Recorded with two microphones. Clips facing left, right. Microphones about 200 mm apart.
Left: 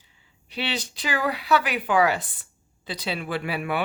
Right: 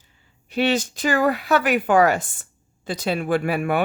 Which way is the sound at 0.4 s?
45° right (ahead or behind).